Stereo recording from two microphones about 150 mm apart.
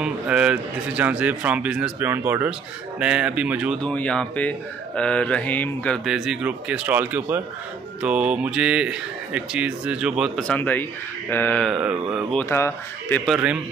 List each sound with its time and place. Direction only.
0.0 s speech: 5° right (ahead or behind)
3.8 s speech: 10° left (ahead or behind)
6.0 s speech: centre (ahead or behind)
10.4 s speech: 10° left (ahead or behind)
11.7 s mantra: 5° right (ahead or behind)
12.4 s speech: 15° left (ahead or behind)
13.2 s mantra: 5° right (ahead or behind)